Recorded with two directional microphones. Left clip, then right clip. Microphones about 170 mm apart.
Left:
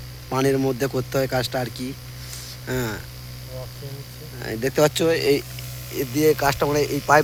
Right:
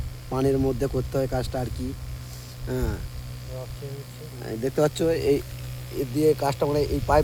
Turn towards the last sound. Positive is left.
turn(degrees=5)  # may be behind; listen again after turning